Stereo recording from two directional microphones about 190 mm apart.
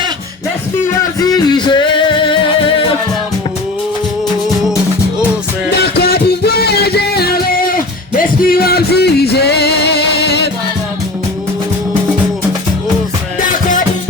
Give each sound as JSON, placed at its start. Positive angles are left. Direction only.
{"t": 1.2, "sound": "music", "side_deg": 20}
{"t": 5.7, "sound": "music", "side_deg": 55}